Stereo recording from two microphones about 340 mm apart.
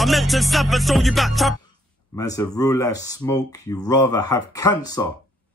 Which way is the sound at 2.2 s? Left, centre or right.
Centre.